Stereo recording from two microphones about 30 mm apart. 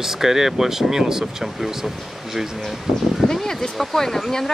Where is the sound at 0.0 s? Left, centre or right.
Centre.